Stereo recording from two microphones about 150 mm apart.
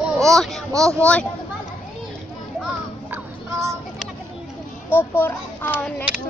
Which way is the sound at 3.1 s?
20° right (ahead or behind).